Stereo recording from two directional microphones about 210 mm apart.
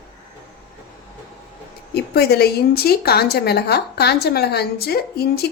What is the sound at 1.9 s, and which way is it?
A woman's voice, 50° left (ahead or behind).